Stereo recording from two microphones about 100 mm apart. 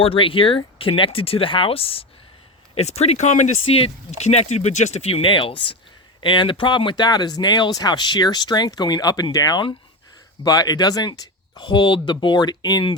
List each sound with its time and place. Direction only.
0.0 s speech: 65° left (ahead or behind)
2.7 s speech: 90° left; by 13.0 s 45° left (ahead or behind)